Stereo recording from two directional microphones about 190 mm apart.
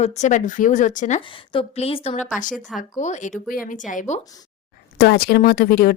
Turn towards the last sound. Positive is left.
turn(degrees=50)  # may be behind; listen again after turning